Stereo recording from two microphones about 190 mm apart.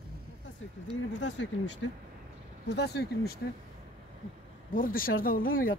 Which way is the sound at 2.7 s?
60° left (ahead or behind).